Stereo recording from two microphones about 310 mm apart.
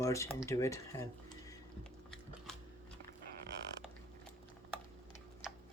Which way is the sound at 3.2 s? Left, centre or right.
Right.